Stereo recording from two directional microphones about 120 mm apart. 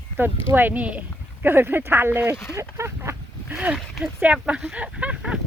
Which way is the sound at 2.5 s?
25° right (ahead or behind).